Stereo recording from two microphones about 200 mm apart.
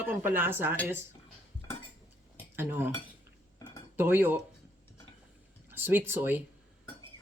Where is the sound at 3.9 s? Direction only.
10° right (ahead or behind).